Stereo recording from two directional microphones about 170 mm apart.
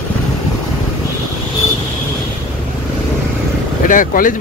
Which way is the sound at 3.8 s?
50° left (ahead or behind).